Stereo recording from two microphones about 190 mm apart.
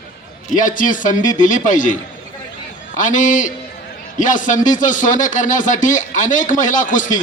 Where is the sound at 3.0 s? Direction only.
40° left (ahead or behind).